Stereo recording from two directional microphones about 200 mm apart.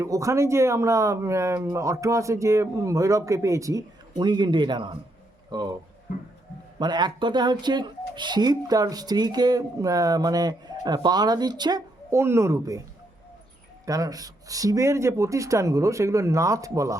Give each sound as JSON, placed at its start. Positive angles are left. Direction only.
{"t": 0.0, "sound": "speech", "side_deg": -15}
{"t": 6.7, "sound": "speech", "side_deg": -20}
{"t": 13.8, "sound": "speech", "side_deg": -15}